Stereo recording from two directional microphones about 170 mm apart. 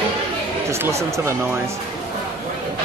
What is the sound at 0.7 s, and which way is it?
Speech, 15° right (ahead or behind).